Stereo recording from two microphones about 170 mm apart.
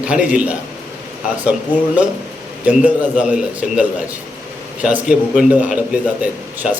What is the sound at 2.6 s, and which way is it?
A man's voice, 5° right (ahead or behind).